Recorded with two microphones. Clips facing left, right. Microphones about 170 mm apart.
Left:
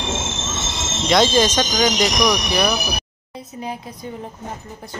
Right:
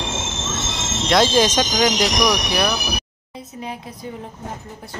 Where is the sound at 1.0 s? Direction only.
5° right (ahead or behind).